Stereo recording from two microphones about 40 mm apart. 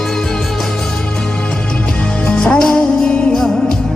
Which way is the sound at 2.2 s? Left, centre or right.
Left.